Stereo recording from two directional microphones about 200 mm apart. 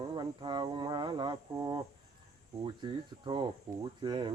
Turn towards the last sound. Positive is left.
turn(degrees=-20)  # may be behind; listen again after turning